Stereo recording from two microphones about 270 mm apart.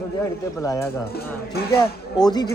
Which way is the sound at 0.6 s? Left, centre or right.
Centre.